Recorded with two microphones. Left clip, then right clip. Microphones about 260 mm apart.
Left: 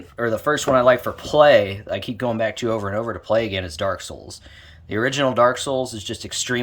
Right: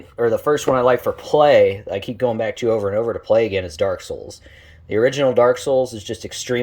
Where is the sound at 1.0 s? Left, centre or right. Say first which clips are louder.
Even; left.